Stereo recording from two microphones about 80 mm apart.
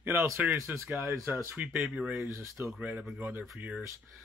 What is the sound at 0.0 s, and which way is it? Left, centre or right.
Speech, right.